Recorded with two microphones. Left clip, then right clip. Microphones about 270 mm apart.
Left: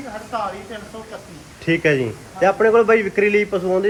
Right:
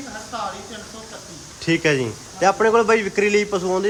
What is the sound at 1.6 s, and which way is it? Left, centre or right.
A man's voice, centre.